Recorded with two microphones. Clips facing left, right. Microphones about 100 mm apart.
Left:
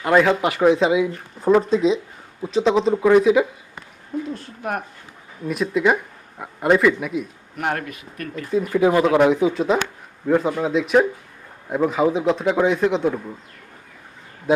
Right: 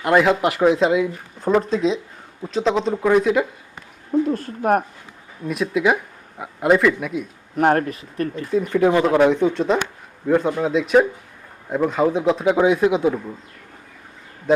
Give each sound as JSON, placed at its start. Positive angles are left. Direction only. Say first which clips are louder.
{"t": 0.0, "sound": "speech", "louder": "even", "side_deg": -5}
{"t": 4.3, "sound": "speech", "louder": "right 9 dB", "side_deg": -45}
{"t": 5.5, "sound": "speech", "louder": "even", "side_deg": 0}
{"t": 7.5, "sound": "speech", "louder": "right 8 dB", "side_deg": -40}
{"t": 8.4, "sound": "speech", "louder": "even", "side_deg": 5}